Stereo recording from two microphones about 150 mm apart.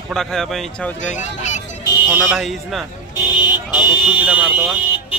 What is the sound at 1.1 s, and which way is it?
Speech, 55° left (ahead or behind).